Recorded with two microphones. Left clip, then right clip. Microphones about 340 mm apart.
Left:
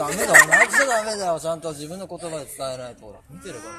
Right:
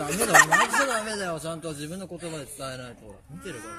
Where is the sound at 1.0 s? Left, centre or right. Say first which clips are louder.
Left 7 dB; centre.